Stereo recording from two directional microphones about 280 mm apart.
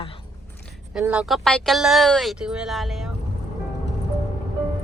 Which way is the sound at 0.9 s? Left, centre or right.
Centre.